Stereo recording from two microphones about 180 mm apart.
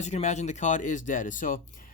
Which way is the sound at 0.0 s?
40° left (ahead or behind).